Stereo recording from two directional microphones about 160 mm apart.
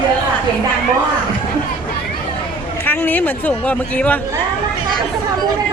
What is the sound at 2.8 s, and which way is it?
Speech, 10° left (ahead or behind).